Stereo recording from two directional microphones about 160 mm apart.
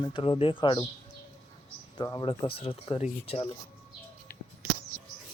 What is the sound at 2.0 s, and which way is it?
Speech, 30° left (ahead or behind).